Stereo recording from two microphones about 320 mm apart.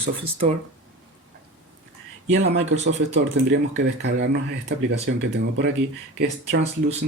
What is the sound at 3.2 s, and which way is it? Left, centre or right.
Speech, right.